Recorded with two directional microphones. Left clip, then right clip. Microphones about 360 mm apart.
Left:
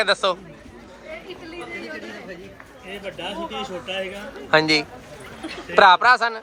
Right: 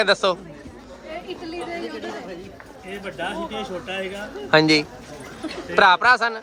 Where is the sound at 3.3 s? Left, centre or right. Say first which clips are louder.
Even; centre.